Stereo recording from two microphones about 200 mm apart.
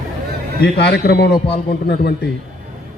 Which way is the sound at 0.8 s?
55° left (ahead or behind).